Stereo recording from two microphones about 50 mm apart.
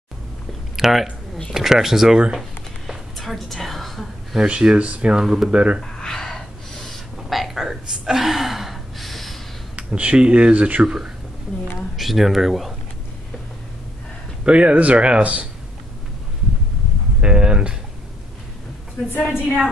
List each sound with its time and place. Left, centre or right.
0.7 s speech: centre
2.9 s a sound: centre
4.4 s speech: centre
5.2 s speech: centre
5.5 s speech: right
5.9 s gasp: centre
7.2 s gasp: centre
9.8 s speech: right
10.8 s speech: centre
12.0 s speech: centre
14.4 s speech: right
17.2 s speech: centre
19.2 s speech: centre